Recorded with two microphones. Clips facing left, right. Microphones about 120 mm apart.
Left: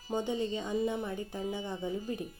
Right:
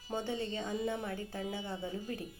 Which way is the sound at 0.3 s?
15° left (ahead or behind).